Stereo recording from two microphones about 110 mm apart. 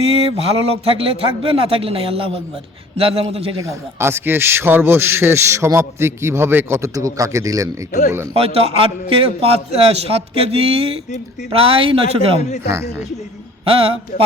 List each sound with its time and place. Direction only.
0.0 s a man's voice: 65° right (ahead or behind)
3.6 s a man's voice: 25° right (ahead or behind)
8.4 s a man's voice: 65° right (ahead or behind)
13.7 s a man's voice: 60° right (ahead or behind)